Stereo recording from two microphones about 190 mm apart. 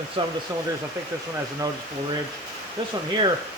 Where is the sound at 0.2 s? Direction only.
25° right (ahead or behind).